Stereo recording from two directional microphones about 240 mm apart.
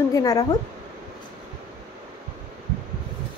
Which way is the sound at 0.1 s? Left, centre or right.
Centre.